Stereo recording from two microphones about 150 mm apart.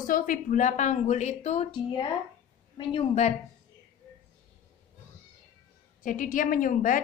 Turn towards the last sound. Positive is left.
turn(degrees=65)  # may be behind; listen again after turning